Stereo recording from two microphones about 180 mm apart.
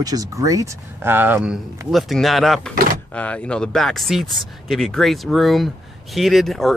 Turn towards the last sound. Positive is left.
turn(degrees=0)  # may be behind; listen again after turning